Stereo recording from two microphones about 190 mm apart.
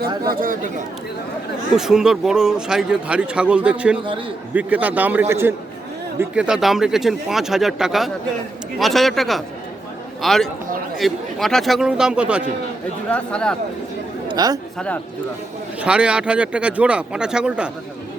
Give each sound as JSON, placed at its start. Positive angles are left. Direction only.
{"t": 0.2, "sound": "speech", "side_deg": -50}
{"t": 1.7, "sound": "a man's voice", "side_deg": -5}
{"t": 13.1, "sound": "speech", "side_deg": 5}
{"t": 14.3, "sound": "speech", "side_deg": -20}
{"t": 15.8, "sound": "speech", "side_deg": -5}